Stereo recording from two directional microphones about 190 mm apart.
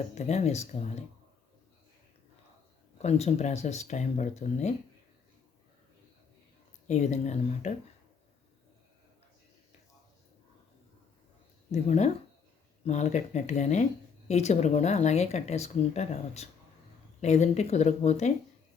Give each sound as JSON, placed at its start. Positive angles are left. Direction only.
{"t": 0.1, "sound": "speech", "side_deg": 35}
{"t": 3.0, "sound": "speech", "side_deg": 35}
{"t": 6.8, "sound": "speech", "side_deg": 35}
{"t": 11.7, "sound": "speech", "side_deg": 35}